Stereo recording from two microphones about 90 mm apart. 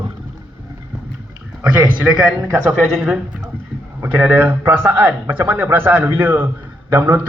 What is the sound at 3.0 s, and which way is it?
Speech, 5° right (ahead or behind).